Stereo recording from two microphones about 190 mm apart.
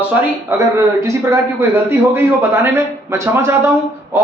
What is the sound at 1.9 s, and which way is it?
A man's voice, 10° right (ahead or behind).